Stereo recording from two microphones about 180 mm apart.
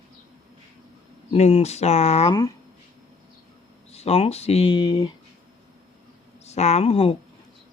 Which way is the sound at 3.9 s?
35° left (ahead or behind).